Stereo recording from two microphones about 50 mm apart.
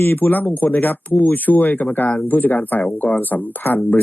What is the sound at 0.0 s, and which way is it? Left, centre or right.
Speech, left.